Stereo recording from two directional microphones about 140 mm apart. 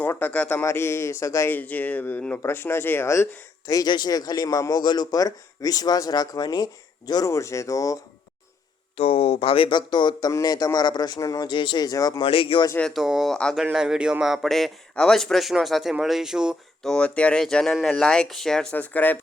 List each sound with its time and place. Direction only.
0.0 s a man's voice: 15° left (ahead or behind)
3.7 s a man's voice: 30° left (ahead or behind)
9.0 s speech: 45° left (ahead or behind); by 12.2 s 25° left (ahead or behind)
12.2 s speech: 40° left (ahead or behind)
12.9 s a man's voice: 5° right (ahead or behind); by 19.2 s 10° left (ahead or behind)